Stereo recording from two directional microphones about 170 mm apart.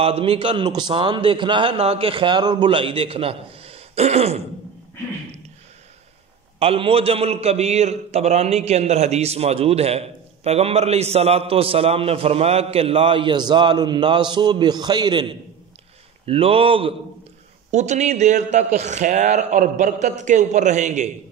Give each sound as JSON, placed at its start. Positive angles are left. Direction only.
{"t": 0.0, "sound": "a man's voice", "side_deg": -35}
{"t": 6.6, "sound": "a man's voice", "side_deg": -35}
{"t": 17.6, "sound": "a man's voice", "side_deg": -45}